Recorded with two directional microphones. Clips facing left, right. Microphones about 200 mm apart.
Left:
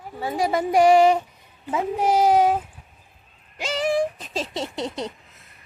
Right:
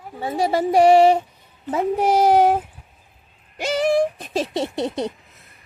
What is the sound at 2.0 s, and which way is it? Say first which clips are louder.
Child singing: right 2 dB; 65° right (ahead or behind).